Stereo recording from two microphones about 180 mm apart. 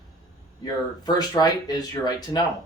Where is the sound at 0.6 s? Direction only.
20° left (ahead or behind).